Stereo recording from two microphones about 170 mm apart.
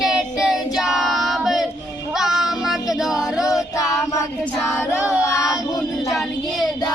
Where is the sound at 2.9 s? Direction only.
Centre (ahead or behind).